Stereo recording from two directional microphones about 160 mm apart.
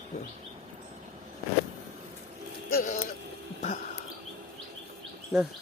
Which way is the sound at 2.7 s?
65° left (ahead or behind).